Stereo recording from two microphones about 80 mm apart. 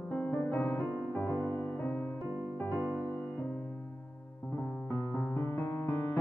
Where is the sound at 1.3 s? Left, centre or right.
Left.